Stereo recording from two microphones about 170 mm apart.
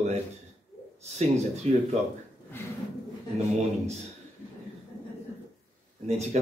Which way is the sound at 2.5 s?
15° left (ahead or behind).